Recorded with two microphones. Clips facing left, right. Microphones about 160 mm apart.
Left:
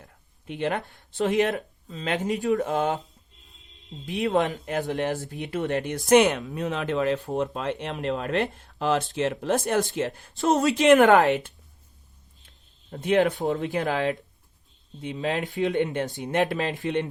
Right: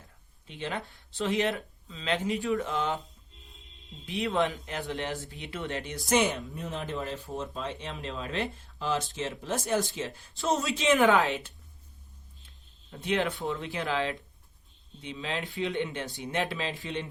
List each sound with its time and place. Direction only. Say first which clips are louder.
0.0 s speech: left 8 dB; 60° left (ahead or behind)
4.0 s speech: left 4 dB; 45° left (ahead or behind)
6.1 s speech: left 8 dB; 60° left (ahead or behind)
12.9 s speech: left 8 dB; 50° left (ahead or behind)